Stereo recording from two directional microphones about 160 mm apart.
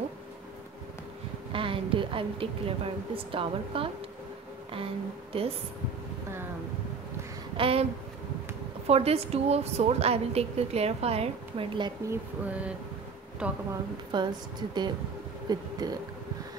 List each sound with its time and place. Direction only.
1.5 s a woman's voice: 35° right (ahead or behind)
5.3 s a woman's voice: 35° right (ahead or behind)
7.5 s speech: 35° right (ahead or behind)
8.8 s a woman's voice: 40° right (ahead or behind)
12.1 s a sound: 10° right (ahead or behind)
14.1 s a woman's voice: 25° right (ahead or behind)